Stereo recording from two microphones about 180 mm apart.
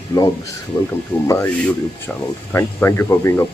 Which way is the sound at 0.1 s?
20° left (ahead or behind).